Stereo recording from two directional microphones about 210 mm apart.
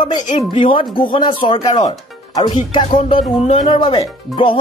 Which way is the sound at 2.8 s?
30° left (ahead or behind).